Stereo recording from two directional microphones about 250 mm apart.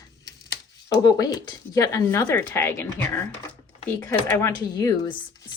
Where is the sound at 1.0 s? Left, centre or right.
Centre.